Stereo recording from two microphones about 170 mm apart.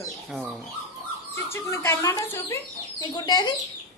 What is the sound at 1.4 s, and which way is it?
Speech, 15° left (ahead or behind).